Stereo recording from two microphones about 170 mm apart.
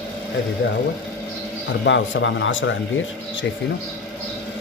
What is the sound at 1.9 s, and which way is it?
Speech, 90° left.